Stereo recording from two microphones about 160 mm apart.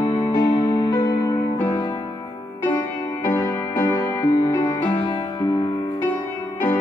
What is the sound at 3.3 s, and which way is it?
Music, 20° left (ahead or behind).